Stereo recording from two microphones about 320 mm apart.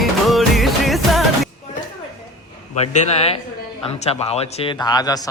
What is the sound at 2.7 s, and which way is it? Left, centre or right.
Speech, left.